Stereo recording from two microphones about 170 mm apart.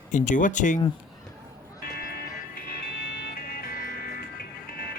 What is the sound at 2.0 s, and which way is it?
Music, 60° left (ahead or behind).